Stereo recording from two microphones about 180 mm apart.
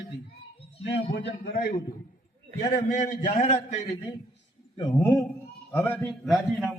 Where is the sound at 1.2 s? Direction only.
70° left (ahead or behind).